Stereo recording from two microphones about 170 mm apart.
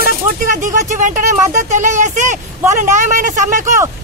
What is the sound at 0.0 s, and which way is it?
Speech, 50° right (ahead or behind).